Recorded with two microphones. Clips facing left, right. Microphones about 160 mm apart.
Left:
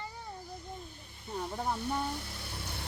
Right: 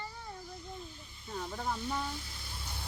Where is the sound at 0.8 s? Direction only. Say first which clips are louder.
Even; 55° left (ahead or behind).